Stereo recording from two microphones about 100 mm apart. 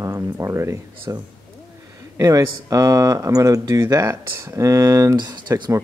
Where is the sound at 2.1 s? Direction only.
35° right (ahead or behind).